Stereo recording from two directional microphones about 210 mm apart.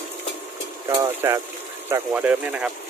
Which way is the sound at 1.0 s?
15° right (ahead or behind).